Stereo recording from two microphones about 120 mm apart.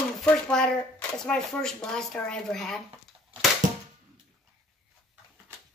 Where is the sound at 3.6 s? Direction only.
90° right.